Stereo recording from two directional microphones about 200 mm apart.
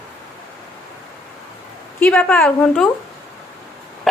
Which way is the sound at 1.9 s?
5° left (ahead or behind).